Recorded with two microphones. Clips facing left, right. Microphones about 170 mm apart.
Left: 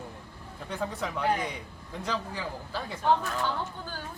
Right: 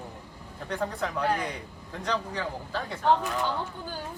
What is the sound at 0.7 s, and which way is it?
A man's voice, 5° left (ahead or behind).